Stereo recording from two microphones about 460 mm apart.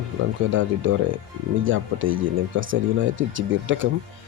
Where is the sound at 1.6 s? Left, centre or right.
Right.